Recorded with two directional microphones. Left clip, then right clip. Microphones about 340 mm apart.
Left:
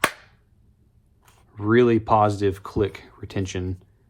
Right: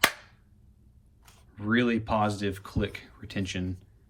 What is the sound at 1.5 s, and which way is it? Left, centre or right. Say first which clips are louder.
Speech: left 9 dB; centre.